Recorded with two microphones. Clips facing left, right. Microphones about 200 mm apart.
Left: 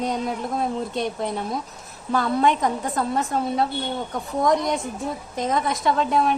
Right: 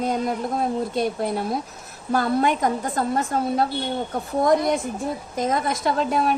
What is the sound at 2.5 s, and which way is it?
Speech, 45° right (ahead or behind).